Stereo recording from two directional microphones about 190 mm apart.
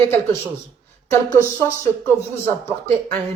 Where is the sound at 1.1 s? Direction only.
15° left (ahead or behind).